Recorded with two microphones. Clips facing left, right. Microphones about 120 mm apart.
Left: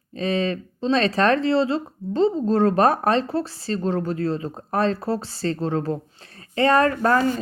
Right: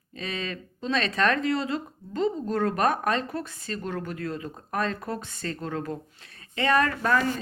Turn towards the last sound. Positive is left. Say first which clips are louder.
# left 5 dB
turn(degrees=35)  # may be behind; listen again after turning